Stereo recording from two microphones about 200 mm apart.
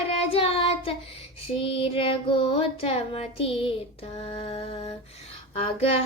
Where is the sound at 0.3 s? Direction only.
30° left (ahead or behind).